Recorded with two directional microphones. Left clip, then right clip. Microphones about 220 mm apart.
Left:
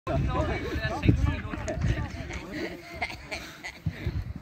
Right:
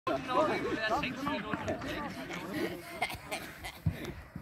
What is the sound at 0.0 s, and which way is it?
Speech, 45° left (ahead or behind).